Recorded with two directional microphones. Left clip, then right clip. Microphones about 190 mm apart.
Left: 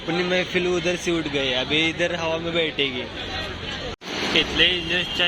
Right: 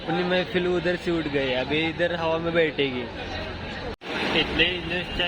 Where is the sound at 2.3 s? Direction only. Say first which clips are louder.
Right 1 dB; 25° right (ahead or behind).